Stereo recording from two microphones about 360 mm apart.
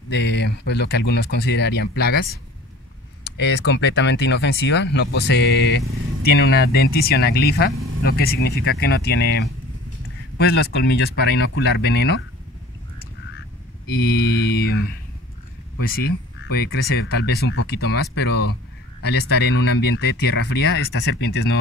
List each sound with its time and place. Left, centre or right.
0.1 s speech: left
3.3 s speech: left
14.0 s speech: left